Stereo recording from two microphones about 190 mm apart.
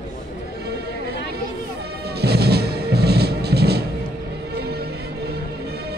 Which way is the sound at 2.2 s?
60° right (ahead or behind).